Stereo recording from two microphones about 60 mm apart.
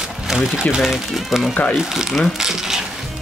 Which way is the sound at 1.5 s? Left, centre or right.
Left.